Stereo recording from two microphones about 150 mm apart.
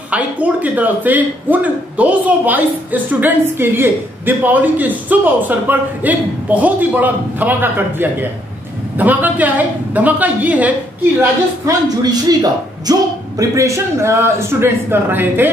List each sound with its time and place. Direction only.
0.1 s a man's voice: 10° right (ahead or behind)
11.1 s a man's voice: 25° right (ahead or behind)